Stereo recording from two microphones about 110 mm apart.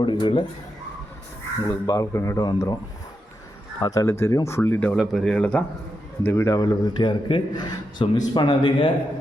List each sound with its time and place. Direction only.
0.0 s speech: 50° left (ahead or behind)
1.6 s a man's voice: 30° left (ahead or behind)
3.8 s speech: 35° left (ahead or behind); by 4.9 s 20° left (ahead or behind)
4.9 s speech: centre (ahead or behind)
6.2 s a man's voice: 25° left (ahead or behind); by 8.9 s 45° left (ahead or behind)